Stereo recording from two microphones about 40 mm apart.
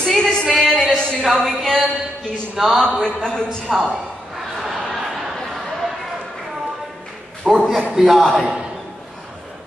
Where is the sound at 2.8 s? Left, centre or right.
Centre.